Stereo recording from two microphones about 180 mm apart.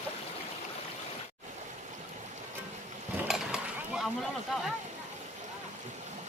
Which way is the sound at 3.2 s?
5° right (ahead or behind).